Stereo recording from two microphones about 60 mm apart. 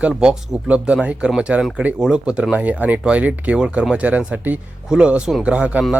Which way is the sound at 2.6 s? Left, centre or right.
Right.